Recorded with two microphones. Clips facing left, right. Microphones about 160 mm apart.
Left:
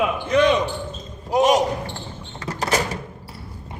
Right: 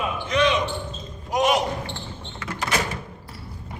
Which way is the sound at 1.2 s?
35° left (ahead or behind).